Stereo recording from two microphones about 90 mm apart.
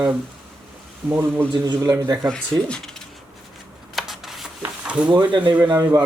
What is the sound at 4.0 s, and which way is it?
Rub, centre (ahead or behind).